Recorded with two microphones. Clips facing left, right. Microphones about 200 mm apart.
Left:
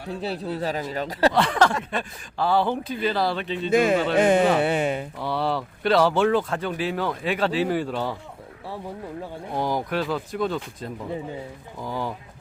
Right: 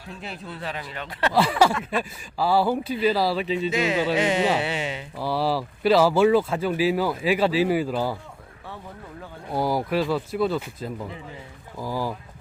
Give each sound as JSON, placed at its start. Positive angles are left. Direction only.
{"t": 0.1, "sound": "speech", "side_deg": 35}
{"t": 1.3, "sound": "speech", "side_deg": -5}
{"t": 3.7, "sound": "speech", "side_deg": 50}
{"t": 5.1, "sound": "speech", "side_deg": -5}
{"t": 9.5, "sound": "speech", "side_deg": -5}